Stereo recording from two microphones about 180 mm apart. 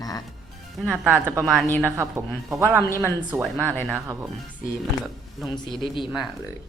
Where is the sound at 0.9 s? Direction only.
10° right (ahead or behind).